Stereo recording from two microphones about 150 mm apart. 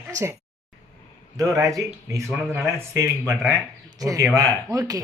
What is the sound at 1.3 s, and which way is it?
Speech, 20° right (ahead or behind).